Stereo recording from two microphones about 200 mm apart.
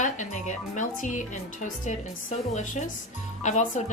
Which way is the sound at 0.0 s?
35° left (ahead or behind).